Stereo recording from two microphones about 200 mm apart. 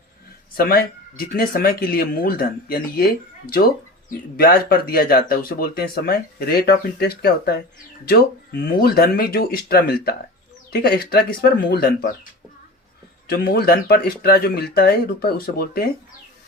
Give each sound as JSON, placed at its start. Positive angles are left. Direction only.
{"t": 0.5, "sound": "speech", "side_deg": 50}
{"t": 13.2, "sound": "speech", "side_deg": 50}